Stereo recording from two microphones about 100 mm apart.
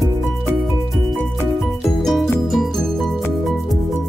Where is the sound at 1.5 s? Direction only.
Centre (ahead or behind).